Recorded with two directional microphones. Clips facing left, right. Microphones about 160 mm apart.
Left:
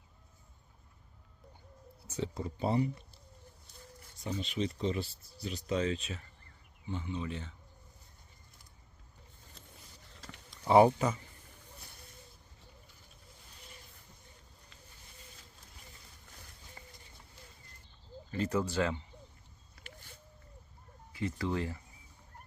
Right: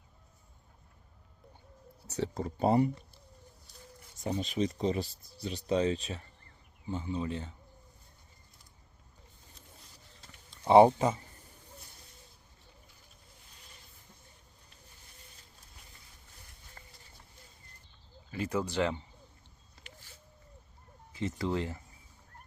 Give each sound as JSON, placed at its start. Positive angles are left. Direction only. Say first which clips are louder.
{"t": 2.0, "sound": "a sound", "louder": "right 3 dB", "side_deg": -70}
{"t": 2.3, "sound": "speech", "louder": "right 6 dB", "side_deg": -45}
{"t": 4.2, "sound": "speech", "louder": "right 4 dB", "side_deg": -45}
{"t": 10.7, "sound": "speech", "louder": "right 3 dB", "side_deg": -25}
{"t": 18.3, "sound": "speech", "louder": "left 1 dB", "side_deg": -10}
{"t": 21.1, "sound": "speech", "louder": "right 2 dB", "side_deg": -25}